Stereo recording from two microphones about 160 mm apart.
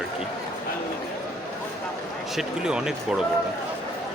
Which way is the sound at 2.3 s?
5° right (ahead or behind).